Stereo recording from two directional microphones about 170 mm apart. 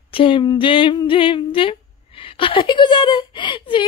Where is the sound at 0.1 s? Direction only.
30° left (ahead or behind).